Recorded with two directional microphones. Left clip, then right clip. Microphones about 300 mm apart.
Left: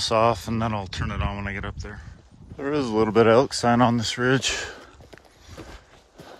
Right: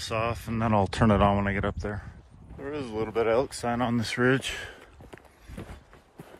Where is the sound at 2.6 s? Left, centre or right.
Centre.